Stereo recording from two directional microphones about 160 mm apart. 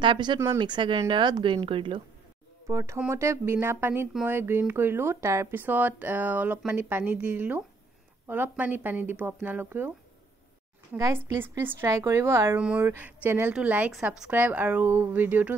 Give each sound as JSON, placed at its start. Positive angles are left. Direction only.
{"t": 0.0, "sound": "speech", "side_deg": -30}
{"t": 2.6, "sound": "a woman's voice", "side_deg": -20}
{"t": 11.0, "sound": "a woman's voice", "side_deg": -20}